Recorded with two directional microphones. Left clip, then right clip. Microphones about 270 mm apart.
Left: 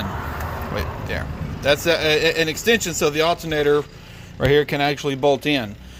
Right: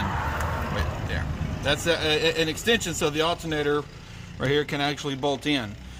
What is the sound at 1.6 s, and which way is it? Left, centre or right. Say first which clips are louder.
Speech: left 6 dB; centre.